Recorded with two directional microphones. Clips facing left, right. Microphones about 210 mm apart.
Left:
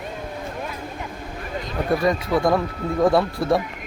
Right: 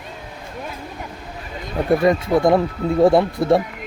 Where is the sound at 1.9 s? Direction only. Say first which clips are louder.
Right 4 dB; 25° right (ahead or behind).